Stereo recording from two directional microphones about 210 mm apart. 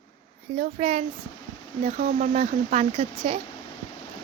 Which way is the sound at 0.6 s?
30° right (ahead or behind).